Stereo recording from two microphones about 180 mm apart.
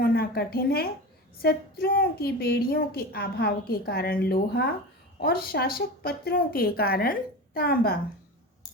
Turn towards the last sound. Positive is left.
turn(degrees=55)  # may be behind; listen again after turning